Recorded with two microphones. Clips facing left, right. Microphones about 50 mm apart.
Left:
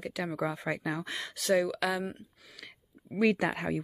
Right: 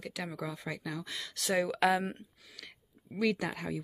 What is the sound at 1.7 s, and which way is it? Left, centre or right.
Speech, right.